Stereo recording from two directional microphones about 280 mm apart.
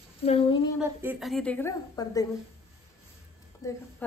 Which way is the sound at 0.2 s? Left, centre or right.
Centre.